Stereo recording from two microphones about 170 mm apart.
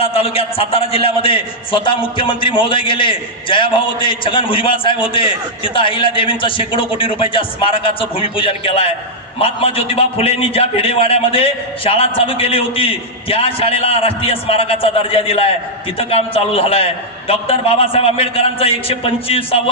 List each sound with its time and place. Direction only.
0.0 s a man's voice: 35° left (ahead or behind)